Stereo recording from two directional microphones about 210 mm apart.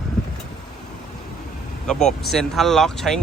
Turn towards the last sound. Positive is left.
turn(degrees=0)  # may be behind; listen again after turning